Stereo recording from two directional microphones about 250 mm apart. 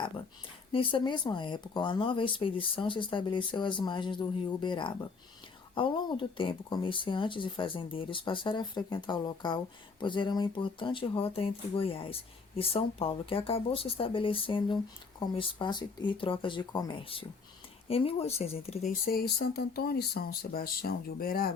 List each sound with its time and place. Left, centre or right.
0.7 s speech: left